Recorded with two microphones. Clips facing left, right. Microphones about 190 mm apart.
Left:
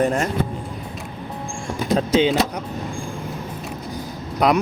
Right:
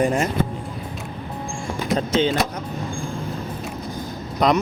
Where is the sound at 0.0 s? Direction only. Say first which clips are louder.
Even; 10° right (ahead or behind).